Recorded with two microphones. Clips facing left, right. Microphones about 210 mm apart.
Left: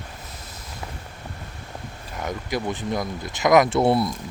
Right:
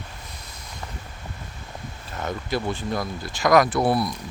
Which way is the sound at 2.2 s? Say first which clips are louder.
Even; 15° left (ahead or behind).